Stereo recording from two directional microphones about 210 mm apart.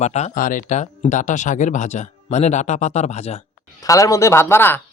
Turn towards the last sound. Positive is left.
turn(degrees=10)  # may be behind; listen again after turning